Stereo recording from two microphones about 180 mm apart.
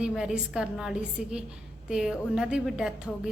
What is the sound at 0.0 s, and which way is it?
A woman's voice, 5° right (ahead or behind).